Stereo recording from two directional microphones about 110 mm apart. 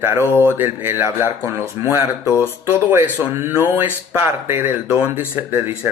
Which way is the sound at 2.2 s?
25° left (ahead or behind).